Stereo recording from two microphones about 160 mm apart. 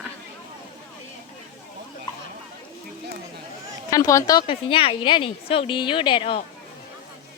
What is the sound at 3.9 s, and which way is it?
Speech, 20° left (ahead or behind).